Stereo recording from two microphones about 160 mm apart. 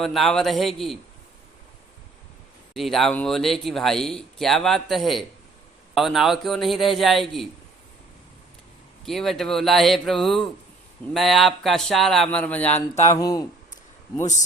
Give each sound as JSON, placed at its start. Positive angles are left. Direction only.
{"t": 0.0, "sound": "speech", "side_deg": 0}
{"t": 2.7, "sound": "speech", "side_deg": 0}
{"t": 9.0, "sound": "speech", "side_deg": 0}
{"t": 13.1, "sound": "speech", "side_deg": 25}